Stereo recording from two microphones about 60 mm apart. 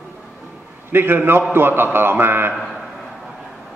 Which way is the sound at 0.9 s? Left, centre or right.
Right.